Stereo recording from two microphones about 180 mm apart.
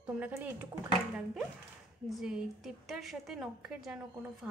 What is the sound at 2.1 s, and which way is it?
A woman's voice, 5° right (ahead or behind).